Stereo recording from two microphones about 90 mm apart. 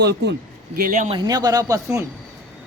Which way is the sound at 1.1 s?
45° right (ahead or behind).